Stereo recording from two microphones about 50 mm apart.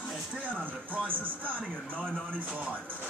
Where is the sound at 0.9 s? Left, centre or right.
Right.